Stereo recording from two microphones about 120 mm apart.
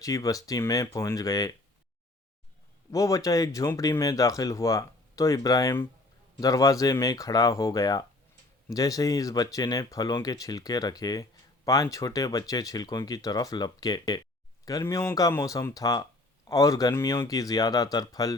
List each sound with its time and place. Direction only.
0.0 s speech: 30° left (ahead or behind)
2.9 s speech: 25° left (ahead or behind)